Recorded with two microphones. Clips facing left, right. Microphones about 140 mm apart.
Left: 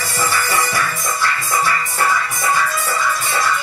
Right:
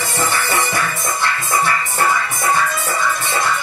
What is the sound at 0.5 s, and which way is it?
Music, 25° right (ahead or behind).